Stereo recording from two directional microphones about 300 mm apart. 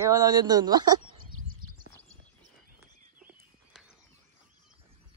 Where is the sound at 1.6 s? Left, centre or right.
Right.